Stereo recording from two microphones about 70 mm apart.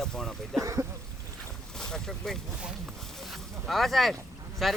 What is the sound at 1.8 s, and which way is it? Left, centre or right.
Speech, centre.